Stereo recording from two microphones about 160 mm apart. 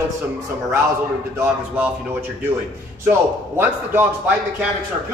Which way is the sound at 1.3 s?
10° right (ahead or behind).